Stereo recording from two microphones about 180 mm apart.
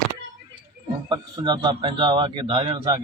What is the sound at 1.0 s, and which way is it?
Speech, 25° right (ahead or behind).